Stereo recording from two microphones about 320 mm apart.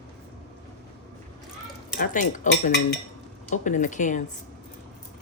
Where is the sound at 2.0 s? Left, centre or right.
Left.